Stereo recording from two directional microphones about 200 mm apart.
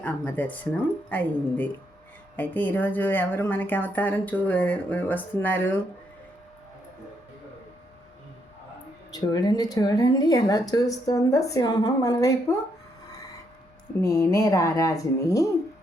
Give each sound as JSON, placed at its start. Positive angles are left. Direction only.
{"t": 0.0, "sound": "speech", "side_deg": 10}
{"t": 9.1, "sound": "speech", "side_deg": 20}
{"t": 14.0, "sound": "speech", "side_deg": 15}